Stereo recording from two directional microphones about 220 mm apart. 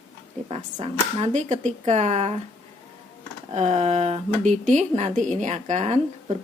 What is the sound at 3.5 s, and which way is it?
A woman's voice, 30° right (ahead or behind).